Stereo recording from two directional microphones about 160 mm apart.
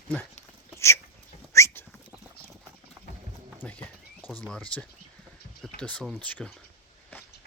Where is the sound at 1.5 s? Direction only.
15° left (ahead or behind).